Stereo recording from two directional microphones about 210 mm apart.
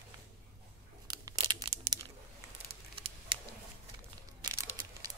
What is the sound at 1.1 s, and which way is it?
Crumpling, 20° right (ahead or behind).